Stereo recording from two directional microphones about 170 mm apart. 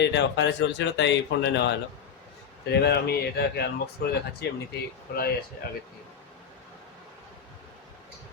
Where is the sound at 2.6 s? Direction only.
70° left (ahead or behind).